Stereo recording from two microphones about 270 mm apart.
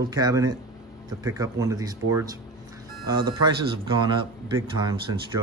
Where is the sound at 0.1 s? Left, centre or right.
Centre.